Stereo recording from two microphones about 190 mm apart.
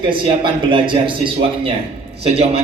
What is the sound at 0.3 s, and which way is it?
A man's voice, 25° right (ahead or behind).